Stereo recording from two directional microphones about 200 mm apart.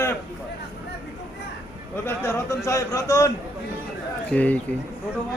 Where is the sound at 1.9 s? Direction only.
15° left (ahead or behind).